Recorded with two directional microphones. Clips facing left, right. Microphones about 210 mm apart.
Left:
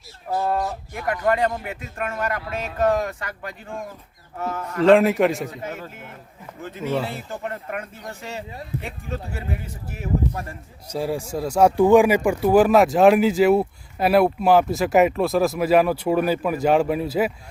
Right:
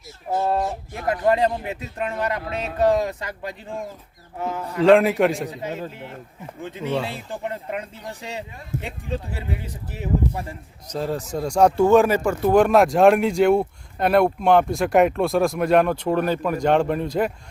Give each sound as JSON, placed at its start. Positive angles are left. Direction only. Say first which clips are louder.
{"t": 0.3, "sound": "speech", "louder": "right 1 dB", "side_deg": -20}
{"t": 4.8, "sound": "speech", "louder": "even", "side_deg": 0}
{"t": 5.5, "sound": "speech", "louder": "right 3 dB", "side_deg": -20}
{"t": 6.8, "sound": "speech", "louder": "left 1 dB", "side_deg": 5}
{"t": 7.1, "sound": "speech", "louder": "right 1 dB", "side_deg": -15}
{"t": 8.7, "sound": "a man's voice", "louder": "right 1 dB", "side_deg": -45}
{"t": 9.6, "sound": "speech", "louder": "right 1 dB", "side_deg": -15}
{"t": 10.8, "sound": "speech", "louder": "left 1 dB", "side_deg": 10}